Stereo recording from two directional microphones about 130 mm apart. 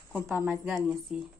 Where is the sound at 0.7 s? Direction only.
Centre (ahead or behind).